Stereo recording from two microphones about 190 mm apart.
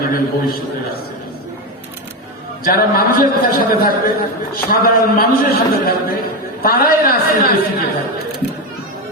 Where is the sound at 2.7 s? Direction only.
50° left (ahead or behind).